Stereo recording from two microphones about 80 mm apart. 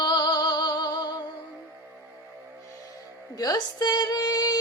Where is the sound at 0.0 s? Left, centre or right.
Left.